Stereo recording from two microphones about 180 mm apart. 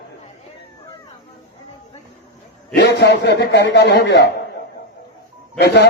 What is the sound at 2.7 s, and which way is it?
A man's voice, 70° left (ahead or behind).